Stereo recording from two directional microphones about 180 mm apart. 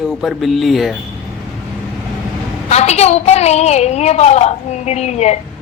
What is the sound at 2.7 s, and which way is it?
A woman's voice, 35° left (ahead or behind).